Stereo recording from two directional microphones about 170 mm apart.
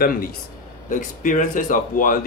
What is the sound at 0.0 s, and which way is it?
A man's voice, 55° left (ahead or behind).